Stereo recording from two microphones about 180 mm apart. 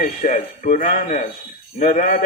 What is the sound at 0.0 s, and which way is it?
Speech, 45° left (ahead or behind).